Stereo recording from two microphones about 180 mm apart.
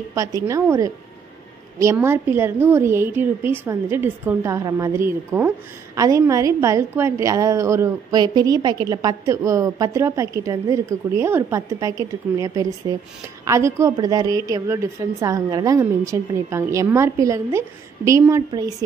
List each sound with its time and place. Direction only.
0.1 s a woman's voice: 20° right (ahead or behind)